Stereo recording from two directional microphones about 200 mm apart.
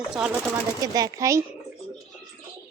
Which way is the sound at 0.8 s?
20° right (ahead or behind).